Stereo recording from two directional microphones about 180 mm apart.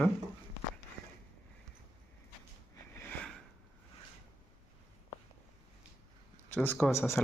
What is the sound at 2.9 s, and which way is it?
Sniff, 10° left (ahead or behind).